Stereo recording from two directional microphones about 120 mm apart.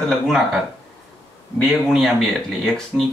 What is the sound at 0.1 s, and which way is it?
Speech, centre (ahead or behind).